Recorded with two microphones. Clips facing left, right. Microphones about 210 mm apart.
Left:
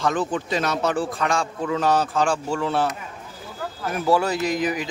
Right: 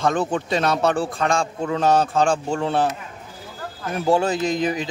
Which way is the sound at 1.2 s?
30° right (ahead or behind).